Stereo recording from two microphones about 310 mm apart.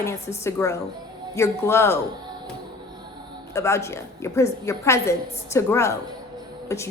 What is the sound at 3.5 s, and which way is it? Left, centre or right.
A woman's voice, centre.